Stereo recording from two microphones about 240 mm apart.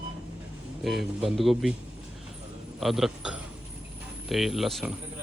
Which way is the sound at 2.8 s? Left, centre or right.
Centre.